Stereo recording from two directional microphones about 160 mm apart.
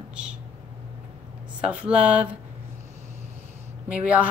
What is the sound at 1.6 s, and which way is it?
Speech, 5° right (ahead or behind).